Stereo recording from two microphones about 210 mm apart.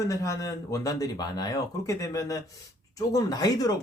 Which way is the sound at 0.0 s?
15° left (ahead or behind).